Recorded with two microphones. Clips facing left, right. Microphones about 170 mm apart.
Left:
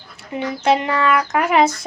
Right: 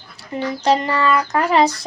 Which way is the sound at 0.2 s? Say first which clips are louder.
Right 1 dB; 35° right (ahead or behind).